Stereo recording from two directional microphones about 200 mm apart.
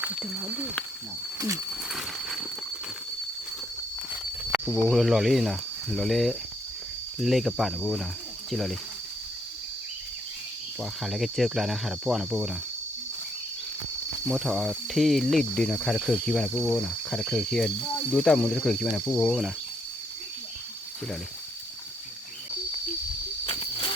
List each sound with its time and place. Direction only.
0.0 s speech: centre (ahead or behind)
1.4 s speech: 15° right (ahead or behind)
1.9 s a sound: centre (ahead or behind)
4.6 s speech: 5° left (ahead or behind)
10.8 s speech: centre (ahead or behind)
14.3 s speech: centre (ahead or behind)
23.5 s cricket: 30° left (ahead or behind)